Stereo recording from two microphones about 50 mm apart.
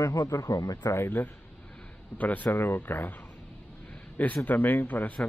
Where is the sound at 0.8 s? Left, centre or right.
Left.